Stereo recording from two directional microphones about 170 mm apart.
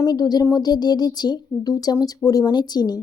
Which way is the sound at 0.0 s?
25° left (ahead or behind).